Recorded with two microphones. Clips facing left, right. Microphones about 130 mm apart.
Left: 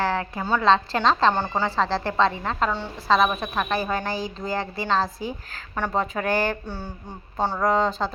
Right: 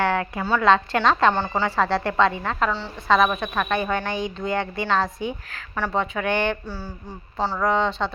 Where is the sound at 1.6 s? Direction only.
30° left (ahead or behind).